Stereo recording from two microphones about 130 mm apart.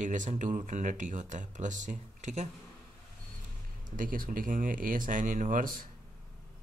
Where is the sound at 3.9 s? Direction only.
90° right.